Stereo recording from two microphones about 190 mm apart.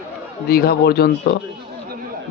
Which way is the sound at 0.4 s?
55° left (ahead or behind).